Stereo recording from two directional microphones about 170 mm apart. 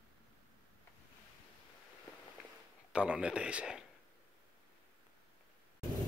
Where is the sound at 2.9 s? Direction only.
5° right (ahead or behind).